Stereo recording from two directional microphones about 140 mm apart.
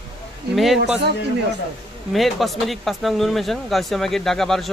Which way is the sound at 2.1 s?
Centre (ahead or behind).